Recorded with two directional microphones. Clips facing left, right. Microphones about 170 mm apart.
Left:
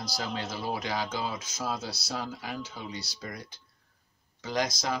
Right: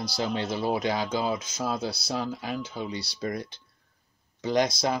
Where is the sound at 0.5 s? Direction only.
25° right (ahead or behind).